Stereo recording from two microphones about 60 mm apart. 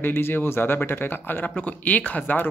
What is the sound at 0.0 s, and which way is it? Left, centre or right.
Speech, left.